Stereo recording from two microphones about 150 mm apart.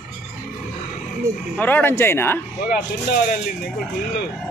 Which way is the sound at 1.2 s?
20° right (ahead or behind).